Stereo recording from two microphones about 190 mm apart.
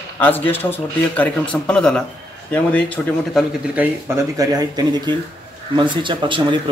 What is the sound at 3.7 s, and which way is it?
Speech, 10° right (ahead or behind).